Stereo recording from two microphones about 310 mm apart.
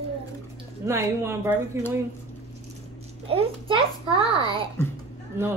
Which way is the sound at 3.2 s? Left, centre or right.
Centre.